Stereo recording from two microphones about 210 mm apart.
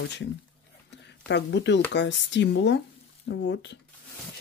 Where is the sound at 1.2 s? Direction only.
55° left (ahead or behind).